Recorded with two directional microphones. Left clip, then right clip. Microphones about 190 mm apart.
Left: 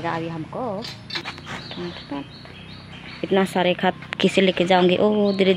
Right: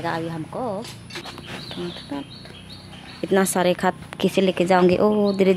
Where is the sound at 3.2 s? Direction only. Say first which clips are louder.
Even; 10° right (ahead or behind).